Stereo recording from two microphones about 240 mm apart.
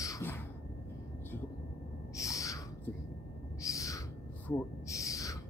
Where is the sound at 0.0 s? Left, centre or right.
Centre.